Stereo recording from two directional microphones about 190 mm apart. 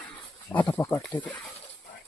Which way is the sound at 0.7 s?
15° left (ahead or behind).